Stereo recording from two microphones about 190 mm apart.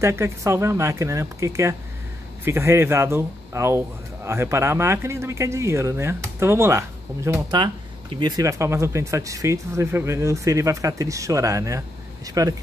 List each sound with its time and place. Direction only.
0.0 s speech: 15° right (ahead or behind)